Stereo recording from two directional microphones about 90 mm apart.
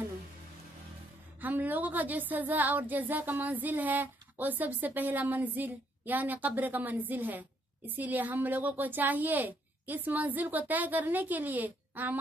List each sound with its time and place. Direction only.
1.4 s speech: 20° right (ahead or behind)